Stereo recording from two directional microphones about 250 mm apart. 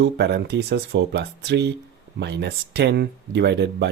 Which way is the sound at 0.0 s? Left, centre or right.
Right.